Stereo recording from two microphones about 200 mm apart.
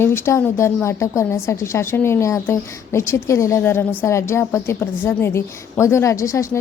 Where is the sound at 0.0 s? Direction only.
10° left (ahead or behind).